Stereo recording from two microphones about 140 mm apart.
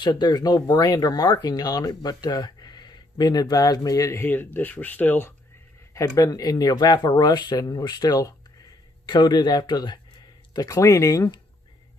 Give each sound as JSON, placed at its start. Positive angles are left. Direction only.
{"t": 0.0, "sound": "speech", "side_deg": 30}
{"t": 5.9, "sound": "speech", "side_deg": 25}